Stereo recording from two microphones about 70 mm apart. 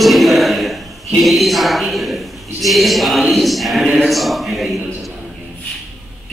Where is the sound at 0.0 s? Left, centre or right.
Centre.